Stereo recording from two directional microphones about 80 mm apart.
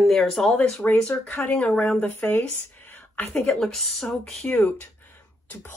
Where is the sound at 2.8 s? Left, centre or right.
Left.